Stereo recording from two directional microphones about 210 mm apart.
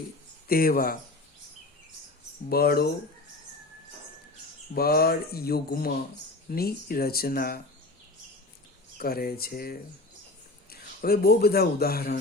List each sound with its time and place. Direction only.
0.4 s mantra: 45° left (ahead or behind)
2.5 s mantra: 50° left (ahead or behind)
4.7 s mantra: 45° left (ahead or behind)
9.0 s mantra: 45° left (ahead or behind)
10.7 s speech: 45° left (ahead or behind)